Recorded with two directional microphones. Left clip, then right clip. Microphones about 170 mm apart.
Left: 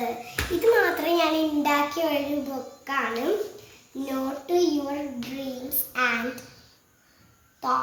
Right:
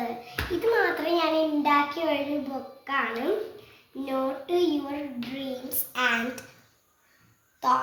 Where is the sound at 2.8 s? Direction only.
5° left (ahead or behind).